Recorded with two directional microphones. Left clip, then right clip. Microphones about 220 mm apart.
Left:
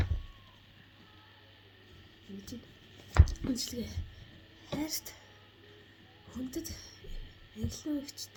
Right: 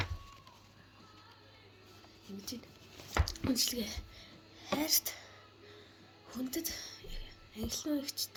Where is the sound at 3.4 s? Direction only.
15° left (ahead or behind).